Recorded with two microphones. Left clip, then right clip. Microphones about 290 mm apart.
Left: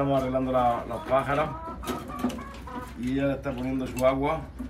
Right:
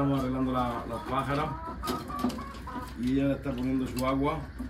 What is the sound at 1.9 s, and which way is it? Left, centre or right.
Printer, right.